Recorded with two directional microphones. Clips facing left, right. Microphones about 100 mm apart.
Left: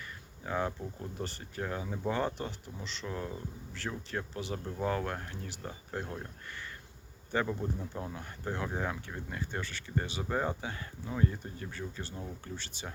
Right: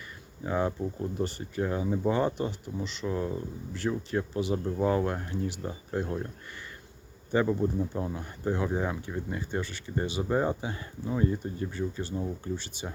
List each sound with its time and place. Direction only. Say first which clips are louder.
0.4 s speech: right 5 dB; 10° right (ahead or behind)
7.3 s speech: right 7 dB; 15° right (ahead or behind)